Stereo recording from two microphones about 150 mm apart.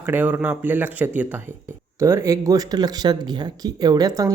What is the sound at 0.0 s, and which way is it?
Speech, 10° right (ahead or behind).